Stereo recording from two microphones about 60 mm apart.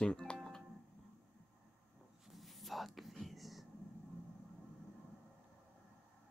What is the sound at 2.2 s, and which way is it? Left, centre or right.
Whispering, centre.